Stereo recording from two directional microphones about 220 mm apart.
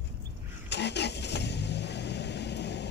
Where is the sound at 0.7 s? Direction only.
50° left (ahead or behind).